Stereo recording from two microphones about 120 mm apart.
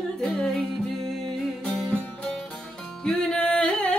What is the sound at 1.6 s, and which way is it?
Music, 5° left (ahead or behind).